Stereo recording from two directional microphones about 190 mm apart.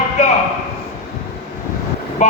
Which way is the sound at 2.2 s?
40° left (ahead or behind).